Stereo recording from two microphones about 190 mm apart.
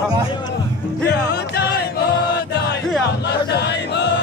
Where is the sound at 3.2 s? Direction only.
65° left (ahead or behind).